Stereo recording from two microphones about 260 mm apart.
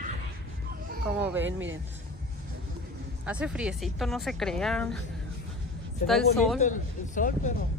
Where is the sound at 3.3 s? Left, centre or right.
Centre.